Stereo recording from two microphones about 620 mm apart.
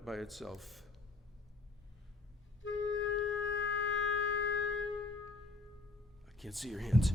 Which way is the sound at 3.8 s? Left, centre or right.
Centre.